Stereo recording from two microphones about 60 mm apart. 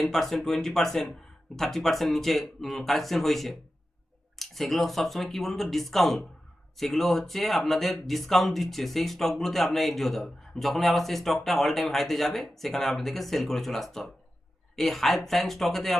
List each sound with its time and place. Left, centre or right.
0.0 s speech: centre